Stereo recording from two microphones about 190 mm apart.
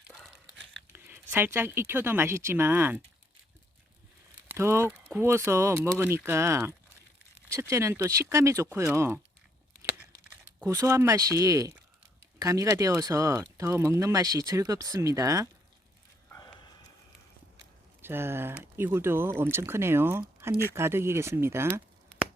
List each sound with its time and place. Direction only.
0.1 s crumpling: centre (ahead or behind)
0.9 s speech: 10° right (ahead or behind)
4.4 s speech: 15° right (ahead or behind)
10.6 s speech: 15° right (ahead or behind)
16.3 s a sound: 20° left (ahead or behind)
18.0 s speech: 10° right (ahead or behind)